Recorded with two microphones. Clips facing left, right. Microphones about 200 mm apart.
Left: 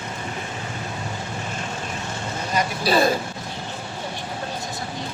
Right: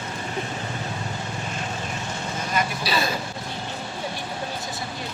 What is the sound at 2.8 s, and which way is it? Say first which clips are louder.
Speech: left 11 dB; 50° left (ahead or behind).